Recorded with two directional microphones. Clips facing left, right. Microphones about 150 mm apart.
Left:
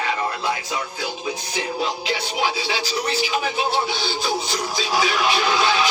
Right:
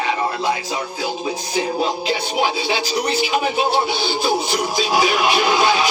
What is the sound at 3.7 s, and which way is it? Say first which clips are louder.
Music: right 4 dB; 15° right (ahead or behind).